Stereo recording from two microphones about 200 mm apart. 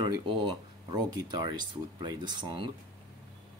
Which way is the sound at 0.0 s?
20° right (ahead or behind).